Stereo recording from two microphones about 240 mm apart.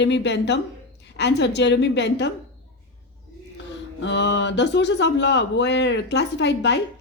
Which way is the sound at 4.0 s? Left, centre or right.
Left.